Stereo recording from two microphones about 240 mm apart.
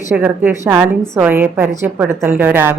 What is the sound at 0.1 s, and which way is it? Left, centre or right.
A woman's voice, centre.